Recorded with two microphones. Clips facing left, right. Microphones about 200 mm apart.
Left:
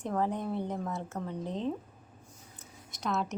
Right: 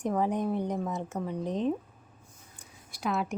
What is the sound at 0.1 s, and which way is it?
A woman's voice, 15° right (ahead or behind).